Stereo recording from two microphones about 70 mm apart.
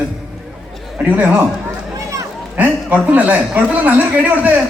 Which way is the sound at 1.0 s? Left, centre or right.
Centre.